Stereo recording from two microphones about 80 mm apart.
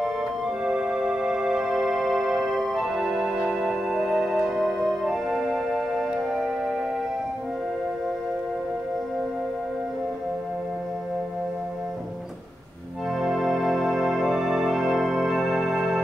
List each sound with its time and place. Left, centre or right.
0.7 s music: centre
13.1 s music: centre